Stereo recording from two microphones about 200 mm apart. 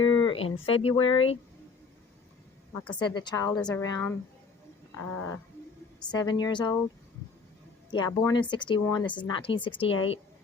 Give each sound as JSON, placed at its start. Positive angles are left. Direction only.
{"t": 0.0, "sound": "a sound", "side_deg": 25}
{"t": 0.4, "sound": "speech", "side_deg": 80}
{"t": 0.7, "sound": "speech", "side_deg": 25}
{"t": 2.7, "sound": "a sound", "side_deg": 5}
{"t": 3.0, "sound": "speech", "side_deg": 20}
{"t": 3.5, "sound": "a woman's voice", "side_deg": 5}
{"t": 3.8, "sound": "a sound", "side_deg": 15}
{"t": 6.1, "sound": "speech", "side_deg": 20}
{"t": 7.9, "sound": "speech", "side_deg": 20}